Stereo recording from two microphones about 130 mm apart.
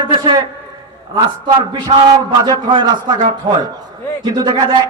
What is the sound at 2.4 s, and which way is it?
Speech, 35° right (ahead or behind).